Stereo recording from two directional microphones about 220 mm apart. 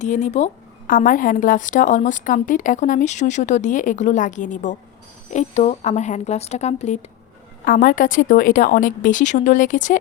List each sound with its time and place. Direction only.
0.0 s a woman's voice: 35° left (ahead or behind)